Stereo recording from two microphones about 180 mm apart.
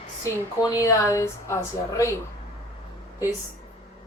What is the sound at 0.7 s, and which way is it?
A woman's voice, 15° left (ahead or behind).